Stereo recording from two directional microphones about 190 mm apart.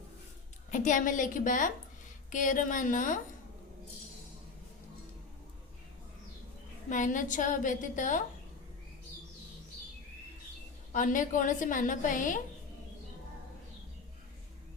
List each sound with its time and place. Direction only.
0.7 s a woman's voice: 40° left (ahead or behind)
6.9 s a woman's voice: 40° left (ahead or behind)
10.9 s a woman's voice: 45° left (ahead or behind)